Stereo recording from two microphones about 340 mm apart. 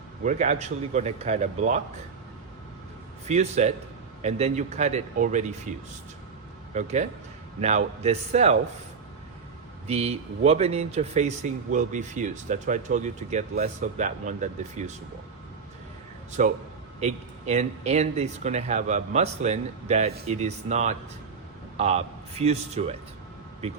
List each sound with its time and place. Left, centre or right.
0.3 s speech: right
3.2 s speech: centre
6.7 s speech: right
9.8 s speech: centre
16.4 s speech: right